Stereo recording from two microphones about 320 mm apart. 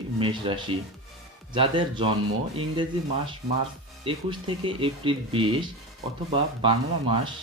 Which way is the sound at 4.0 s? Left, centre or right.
Centre.